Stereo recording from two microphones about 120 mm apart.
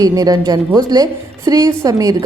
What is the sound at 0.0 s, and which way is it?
A woman's voice, 30° right (ahead or behind).